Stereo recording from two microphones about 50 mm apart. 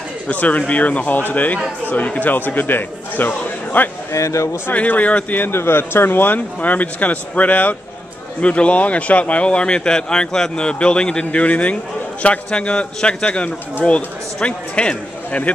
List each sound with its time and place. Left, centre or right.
0.3 s a man's voice: left
4.1 s a man's voice: left
4.7 s a man's voice: left
5.5 s a man's voice: left